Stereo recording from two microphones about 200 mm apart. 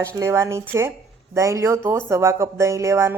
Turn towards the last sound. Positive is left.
turn(degrees=-15)  # may be behind; listen again after turning